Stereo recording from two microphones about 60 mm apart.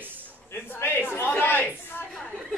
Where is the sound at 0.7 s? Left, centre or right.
Left.